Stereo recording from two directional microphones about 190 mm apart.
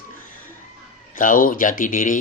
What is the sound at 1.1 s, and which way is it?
Speech, 45° left (ahead or behind).